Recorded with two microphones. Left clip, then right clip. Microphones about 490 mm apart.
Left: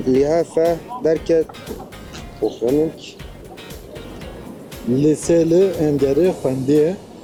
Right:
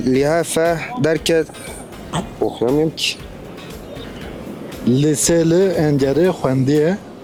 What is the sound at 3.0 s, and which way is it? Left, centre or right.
Speech, right.